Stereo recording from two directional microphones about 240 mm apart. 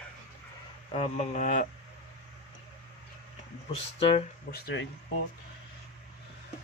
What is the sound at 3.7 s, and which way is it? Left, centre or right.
Speech, left.